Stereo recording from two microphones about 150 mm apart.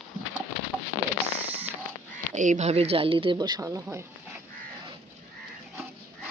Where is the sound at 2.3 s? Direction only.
55° right (ahead or behind); by 4.1 s 15° right (ahead or behind).